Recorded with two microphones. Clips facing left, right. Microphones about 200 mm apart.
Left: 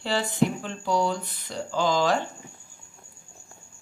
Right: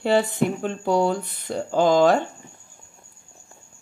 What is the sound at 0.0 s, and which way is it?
Speech, 55° right (ahead or behind).